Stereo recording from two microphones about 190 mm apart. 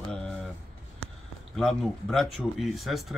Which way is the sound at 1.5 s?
Centre (ahead or behind).